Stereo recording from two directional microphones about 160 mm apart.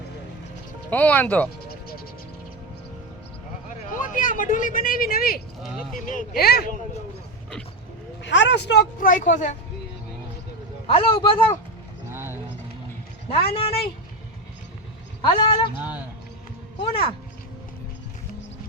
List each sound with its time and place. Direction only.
0.9 s speech: 10° left (ahead or behind)
4.1 s speech: 55° left (ahead or behind); by 6.7 s 80° left
8.2 s speech: 90° left
9.0 s speech: 55° left (ahead or behind)
10.8 s a man's voice: 35° left (ahead or behind)
12.0 s clip-clop: 15° right (ahead or behind)
13.5 s a man's voice: 35° left (ahead or behind)
15.2 s a man's voice: 35° left (ahead or behind)
15.8 s speech: 10° right (ahead or behind)
16.7 s speech: 35° left (ahead or behind)